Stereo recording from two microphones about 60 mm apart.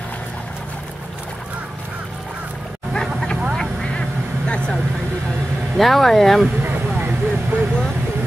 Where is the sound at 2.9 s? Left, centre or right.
Centre.